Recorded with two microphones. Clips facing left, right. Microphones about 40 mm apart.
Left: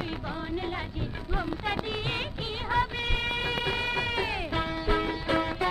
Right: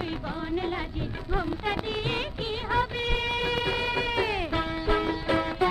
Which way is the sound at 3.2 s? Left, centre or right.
Left.